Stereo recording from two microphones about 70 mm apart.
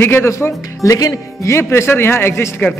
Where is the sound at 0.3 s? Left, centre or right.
Left.